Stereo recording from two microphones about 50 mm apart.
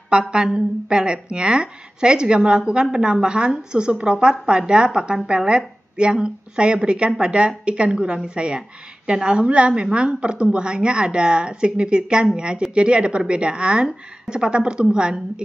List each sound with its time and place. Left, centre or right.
0.1 s a woman's voice: right